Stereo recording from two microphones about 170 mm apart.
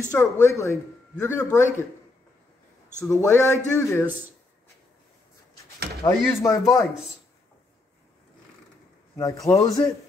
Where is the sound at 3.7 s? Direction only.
15° left (ahead or behind).